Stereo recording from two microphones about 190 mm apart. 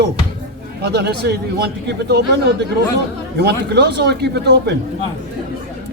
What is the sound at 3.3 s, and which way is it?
Speech, 60° right (ahead or behind).